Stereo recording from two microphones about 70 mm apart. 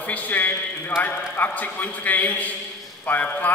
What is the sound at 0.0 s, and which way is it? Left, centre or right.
A man's voice, left.